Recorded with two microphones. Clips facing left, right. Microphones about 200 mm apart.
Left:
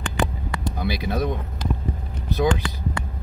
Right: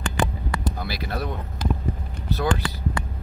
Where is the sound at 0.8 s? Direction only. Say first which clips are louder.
Left 5 dB; 15° left (ahead or behind).